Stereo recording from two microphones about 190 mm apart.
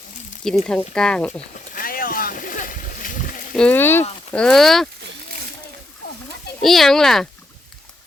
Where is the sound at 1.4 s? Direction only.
45° left (ahead or behind).